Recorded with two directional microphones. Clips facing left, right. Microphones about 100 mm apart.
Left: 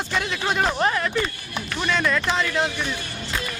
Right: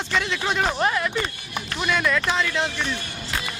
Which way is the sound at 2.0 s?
5° left (ahead or behind).